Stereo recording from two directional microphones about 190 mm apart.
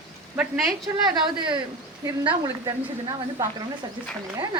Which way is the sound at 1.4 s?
25° right (ahead or behind).